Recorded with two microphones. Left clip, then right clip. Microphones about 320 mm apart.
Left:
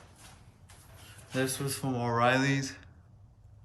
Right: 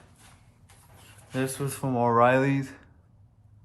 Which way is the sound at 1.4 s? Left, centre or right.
Centre.